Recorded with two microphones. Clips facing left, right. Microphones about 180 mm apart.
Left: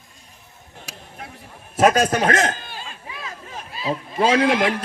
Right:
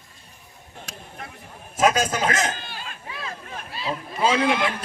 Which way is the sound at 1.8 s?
60° left (ahead or behind).